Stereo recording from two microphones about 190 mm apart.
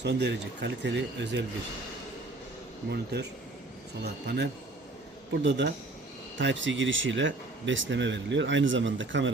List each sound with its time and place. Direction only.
0.0 s speech: 65° right (ahead or behind)
2.9 s speech: 60° right (ahead or behind)
4.3 s speech: 60° right (ahead or behind)
6.4 s speech: 75° right (ahead or behind)